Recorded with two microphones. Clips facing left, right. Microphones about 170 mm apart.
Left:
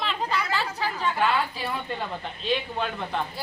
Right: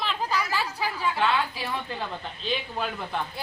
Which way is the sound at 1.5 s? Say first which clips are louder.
Left 1 dB; 5° right (ahead or behind).